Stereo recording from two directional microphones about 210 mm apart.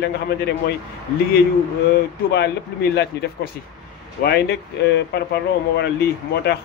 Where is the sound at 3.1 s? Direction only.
50° left (ahead or behind).